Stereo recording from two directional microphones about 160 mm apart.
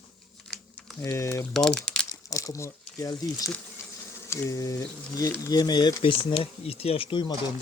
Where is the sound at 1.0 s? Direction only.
20° left (ahead or behind).